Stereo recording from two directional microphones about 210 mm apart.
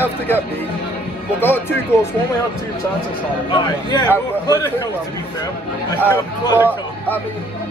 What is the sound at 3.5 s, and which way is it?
A man's voice, 20° left (ahead or behind).